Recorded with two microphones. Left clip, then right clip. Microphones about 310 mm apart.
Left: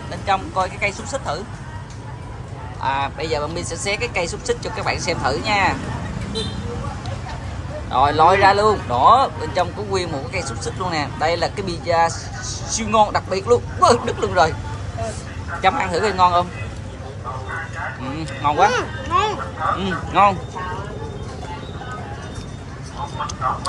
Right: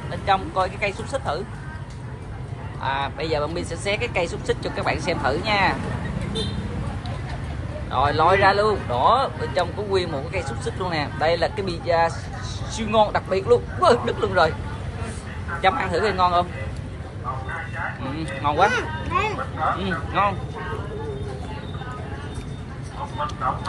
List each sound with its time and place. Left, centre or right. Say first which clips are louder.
0.1 s speech: left 1 dB; centre
2.8 s speech: left 3 dB; centre
7.9 s speech: left 4 dB; centre
15.6 s speech: left 2 dB; centre
18.1 s speech: left 4 dB; centre
18.7 s speech: left 4 dB; centre
19.8 s speech: left 6 dB; centre